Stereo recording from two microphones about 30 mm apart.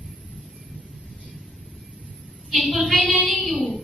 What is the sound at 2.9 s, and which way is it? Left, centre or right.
Child singing, right.